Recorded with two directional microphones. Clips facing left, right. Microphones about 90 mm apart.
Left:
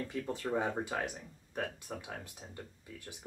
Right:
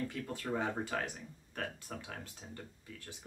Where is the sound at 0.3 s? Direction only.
20° left (ahead or behind).